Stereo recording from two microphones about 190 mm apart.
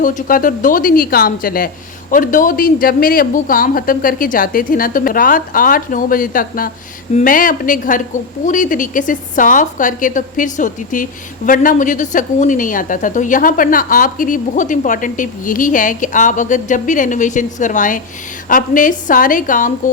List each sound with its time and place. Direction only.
0.0 s a woman's voice: 45° left (ahead or behind)